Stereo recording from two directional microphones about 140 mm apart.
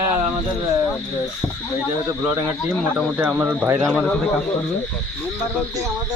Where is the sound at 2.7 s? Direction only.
5° right (ahead or behind).